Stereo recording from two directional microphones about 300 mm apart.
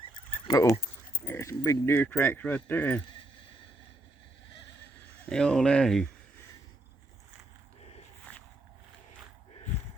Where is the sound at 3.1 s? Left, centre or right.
Centre.